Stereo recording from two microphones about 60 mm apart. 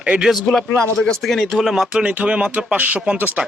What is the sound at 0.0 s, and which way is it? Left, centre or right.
Speech, centre.